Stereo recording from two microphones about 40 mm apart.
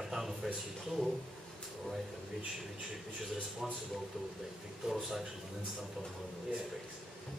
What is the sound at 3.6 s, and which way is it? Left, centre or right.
Speech, centre.